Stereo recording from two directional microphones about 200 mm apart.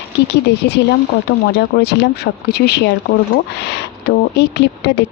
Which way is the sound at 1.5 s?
55° left (ahead or behind).